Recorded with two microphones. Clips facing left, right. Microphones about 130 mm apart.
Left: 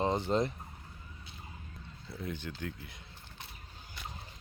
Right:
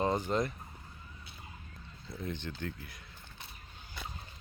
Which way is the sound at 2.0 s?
5° left (ahead or behind).